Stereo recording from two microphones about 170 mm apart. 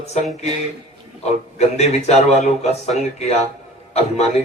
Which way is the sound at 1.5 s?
40° left (ahead or behind).